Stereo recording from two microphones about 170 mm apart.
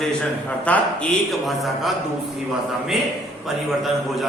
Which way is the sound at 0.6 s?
10° left (ahead or behind).